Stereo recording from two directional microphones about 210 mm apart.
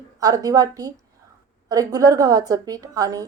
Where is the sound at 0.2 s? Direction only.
15° right (ahead or behind).